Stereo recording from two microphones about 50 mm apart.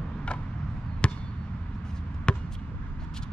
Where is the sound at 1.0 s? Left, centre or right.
Left.